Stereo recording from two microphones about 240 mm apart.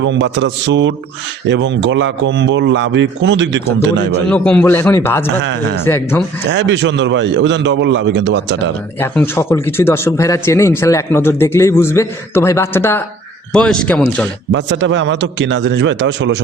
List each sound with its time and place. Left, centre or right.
0.0 s a man's voice: right
4.3 s speech: centre
5.4 s a man's voice: right
5.8 s speech: centre
6.5 s a man's voice: right
9.0 s speech: centre
14.5 s a man's voice: right